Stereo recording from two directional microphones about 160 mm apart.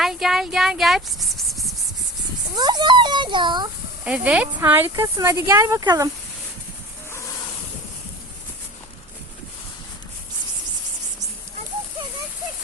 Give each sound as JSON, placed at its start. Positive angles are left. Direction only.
{"t": 0.0, "sound": "a sound", "side_deg": 0}
{"t": 2.6, "sound": "a child's voice", "side_deg": -25}
{"t": 4.0, "sound": "speech", "side_deg": -5}